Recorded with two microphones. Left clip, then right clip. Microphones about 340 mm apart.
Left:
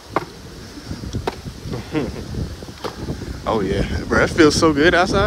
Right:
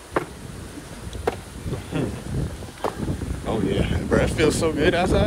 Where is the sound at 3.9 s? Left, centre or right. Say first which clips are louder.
Left 7 dB; centre.